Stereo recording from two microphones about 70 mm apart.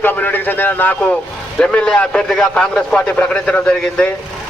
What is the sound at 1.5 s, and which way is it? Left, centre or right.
A man's voice, centre.